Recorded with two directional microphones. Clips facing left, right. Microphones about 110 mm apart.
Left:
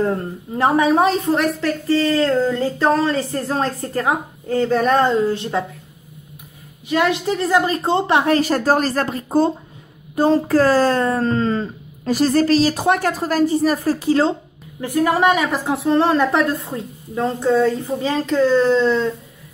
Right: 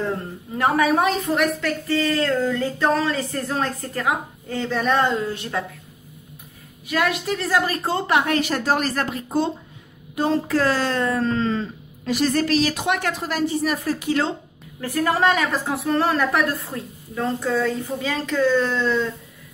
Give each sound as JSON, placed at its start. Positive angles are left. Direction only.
{"t": 0.6, "sound": "a woman's voice", "side_deg": 25}
{"t": 6.9, "sound": "a woman's voice", "side_deg": 25}
{"t": 14.8, "sound": "a woman's voice", "side_deg": 15}